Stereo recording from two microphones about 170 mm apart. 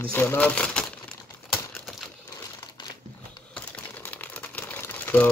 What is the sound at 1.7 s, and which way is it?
Crumpling, centre (ahead or behind).